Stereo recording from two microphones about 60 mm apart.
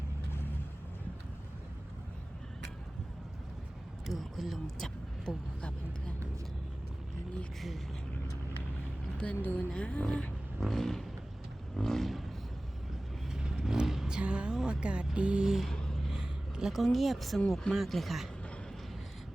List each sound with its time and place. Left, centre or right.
4.0 s a sound: centre
9.3 s speech: left
9.6 s speech: centre
10.6 s speech: centre
11.8 s a sound: centre
13.3 s vehicle: centre
14.2 s music: centre
16.0 s vehicle: centre
17.6 s speech: centre